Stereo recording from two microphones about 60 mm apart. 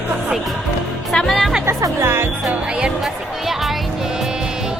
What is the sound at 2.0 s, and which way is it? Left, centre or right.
Speech, right.